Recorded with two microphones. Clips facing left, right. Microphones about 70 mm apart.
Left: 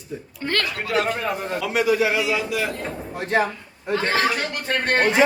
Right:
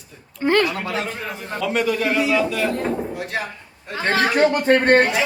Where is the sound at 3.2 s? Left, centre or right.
Left.